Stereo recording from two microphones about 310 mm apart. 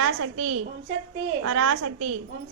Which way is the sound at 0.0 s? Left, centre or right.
Right.